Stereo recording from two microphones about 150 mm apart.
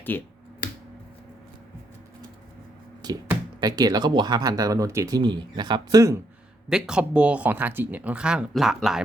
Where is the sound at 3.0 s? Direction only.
25° right (ahead or behind).